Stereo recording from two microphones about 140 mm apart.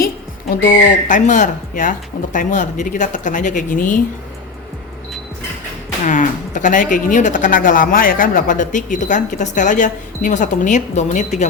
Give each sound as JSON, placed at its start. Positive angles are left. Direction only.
{"t": 0.6, "sound": "speech", "side_deg": 65}
{"t": 6.1, "sound": "speech", "side_deg": 65}